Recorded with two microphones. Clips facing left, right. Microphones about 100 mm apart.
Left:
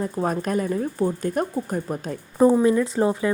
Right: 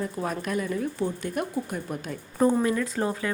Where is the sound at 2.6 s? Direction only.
25° left (ahead or behind).